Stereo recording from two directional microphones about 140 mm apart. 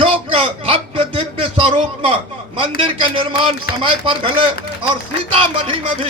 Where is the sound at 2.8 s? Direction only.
40° right (ahead or behind).